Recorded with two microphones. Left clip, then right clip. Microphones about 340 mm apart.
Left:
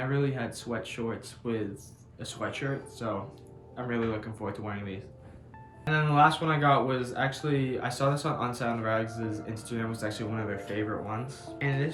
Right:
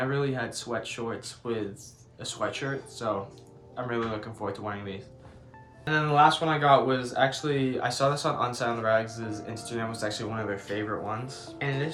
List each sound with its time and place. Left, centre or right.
0.1 s speech: centre